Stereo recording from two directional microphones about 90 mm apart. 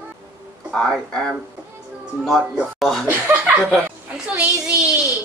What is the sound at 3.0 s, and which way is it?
Speech, 20° right (ahead or behind).